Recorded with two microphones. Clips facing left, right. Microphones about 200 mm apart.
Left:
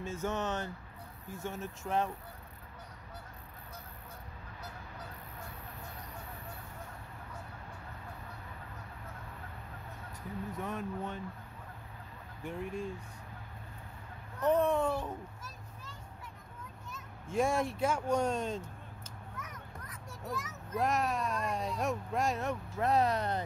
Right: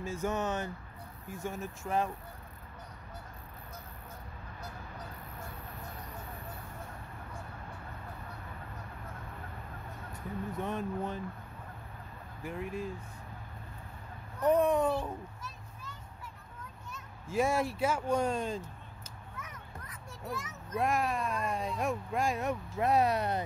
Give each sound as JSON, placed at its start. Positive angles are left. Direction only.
{"t": 0.0, "sound": "a child's voice", "side_deg": -10}
{"t": 10.6, "sound": "speech", "side_deg": -30}
{"t": 12.4, "sound": "speech", "side_deg": -5}
{"t": 14.4, "sound": "a child's voice", "side_deg": -15}
{"t": 15.4, "sound": "children playing", "side_deg": 35}
{"t": 16.9, "sound": "a child's voice", "side_deg": -5}
{"t": 20.2, "sound": "a child's voice", "side_deg": 0}